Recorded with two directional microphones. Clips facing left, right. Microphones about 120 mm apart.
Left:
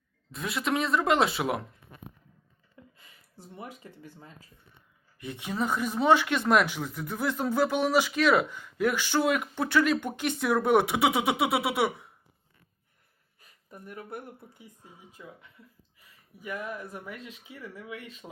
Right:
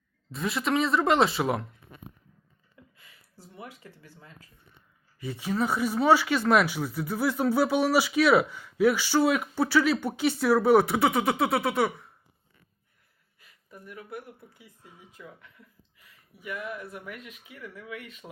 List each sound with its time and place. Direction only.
0.3 s speech: centre (ahead or behind)
3.0 s a sound: 25° left (ahead or behind)
5.2 s speech: centre (ahead or behind)
13.4 s speech: 40° left (ahead or behind); by 15.4 s 20° left (ahead or behind)
16.0 s speech: 40° left (ahead or behind)